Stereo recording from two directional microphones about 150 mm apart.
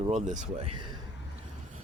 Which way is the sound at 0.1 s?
55° right (ahead or behind).